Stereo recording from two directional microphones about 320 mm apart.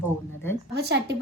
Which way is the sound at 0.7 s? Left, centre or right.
Right.